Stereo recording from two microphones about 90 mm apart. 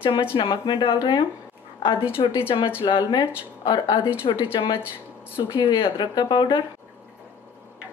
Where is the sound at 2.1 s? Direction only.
90° left.